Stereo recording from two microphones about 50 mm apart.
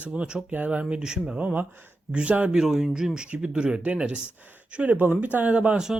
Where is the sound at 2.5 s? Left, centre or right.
Centre.